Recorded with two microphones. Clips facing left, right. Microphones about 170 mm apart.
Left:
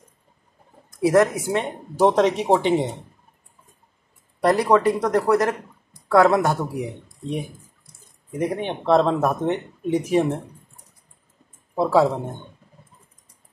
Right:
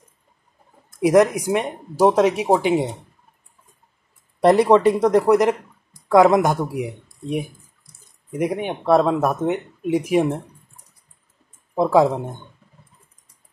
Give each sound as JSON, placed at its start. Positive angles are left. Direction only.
{"t": 1.0, "sound": "speech", "side_deg": -15}
{"t": 4.4, "sound": "speech", "side_deg": -25}
{"t": 11.7, "sound": "speech", "side_deg": -15}